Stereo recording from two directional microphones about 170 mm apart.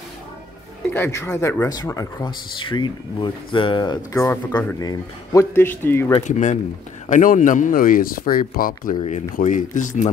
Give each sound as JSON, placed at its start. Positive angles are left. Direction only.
{"t": 0.9, "sound": "speech", "side_deg": 15}
{"t": 6.2, "sound": "speech", "side_deg": 45}
{"t": 9.0, "sound": "speech", "side_deg": 45}